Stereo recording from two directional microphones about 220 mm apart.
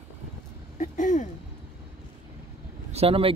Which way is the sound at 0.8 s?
35° left (ahead or behind).